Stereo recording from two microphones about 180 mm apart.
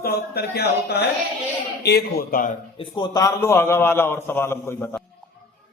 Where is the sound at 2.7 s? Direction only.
25° left (ahead or behind); by 5.0 s 10° left (ahead or behind).